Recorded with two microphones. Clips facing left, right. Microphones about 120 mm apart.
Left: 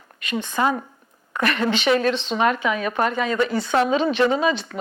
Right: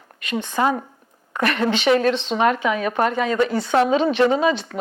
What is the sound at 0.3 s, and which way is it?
Speech, 60° right (ahead or behind).